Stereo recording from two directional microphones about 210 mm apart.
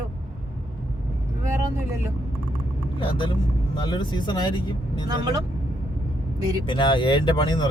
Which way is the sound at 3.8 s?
20° left (ahead or behind).